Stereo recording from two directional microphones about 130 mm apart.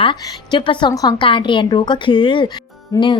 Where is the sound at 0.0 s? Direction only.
35° left (ahead or behind).